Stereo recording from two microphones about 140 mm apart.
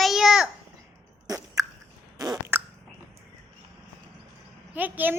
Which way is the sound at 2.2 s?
20° right (ahead or behind).